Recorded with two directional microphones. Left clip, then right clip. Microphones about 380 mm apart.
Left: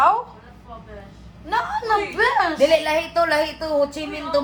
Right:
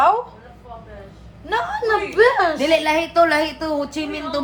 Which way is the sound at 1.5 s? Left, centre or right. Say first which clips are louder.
Even; centre.